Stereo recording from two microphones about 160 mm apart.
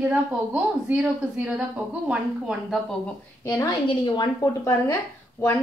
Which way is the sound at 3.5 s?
25° left (ahead or behind).